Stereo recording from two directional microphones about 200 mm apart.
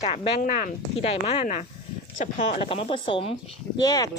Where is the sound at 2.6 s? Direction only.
25° left (ahead or behind).